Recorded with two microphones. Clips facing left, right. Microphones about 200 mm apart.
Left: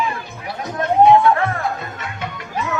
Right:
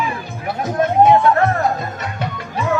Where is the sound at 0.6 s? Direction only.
45° right (ahead or behind).